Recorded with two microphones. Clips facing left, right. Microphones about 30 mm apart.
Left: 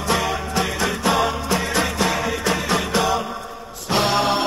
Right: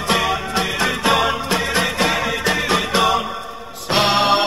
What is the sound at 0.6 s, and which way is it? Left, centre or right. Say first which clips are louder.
Music: right 1 dB; right.